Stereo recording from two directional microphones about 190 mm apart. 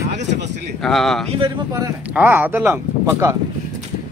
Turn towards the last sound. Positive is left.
turn(degrees=-15)  # may be behind; listen again after turning